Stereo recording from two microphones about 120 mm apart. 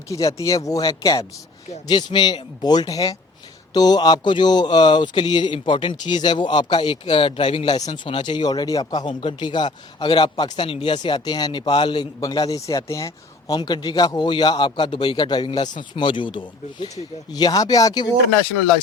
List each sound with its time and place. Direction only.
0.1 s speech: 30° left (ahead or behind)
13.6 s speech: 40° left (ahead or behind)
17.3 s speech: 35° left (ahead or behind)